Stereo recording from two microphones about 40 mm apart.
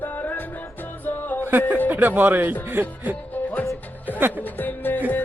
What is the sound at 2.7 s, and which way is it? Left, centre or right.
Speech, right.